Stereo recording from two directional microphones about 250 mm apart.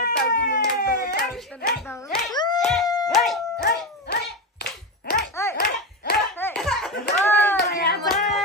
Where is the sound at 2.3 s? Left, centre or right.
Centre.